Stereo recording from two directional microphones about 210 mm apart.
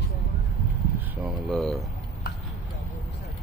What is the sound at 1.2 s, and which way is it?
Speech, centre (ahead or behind).